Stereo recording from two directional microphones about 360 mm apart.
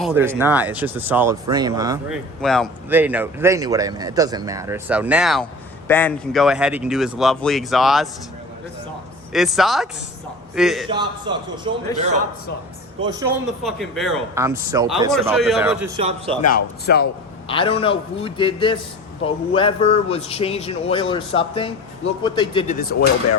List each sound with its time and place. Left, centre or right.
0.0 s speech: centre
2.4 s speech: centre
9.3 s speech: centre
10.8 s speech: centre
13.1 s speech: centre
16.0 s speech: centre
16.8 s speech: left
17.5 s a man's voice: centre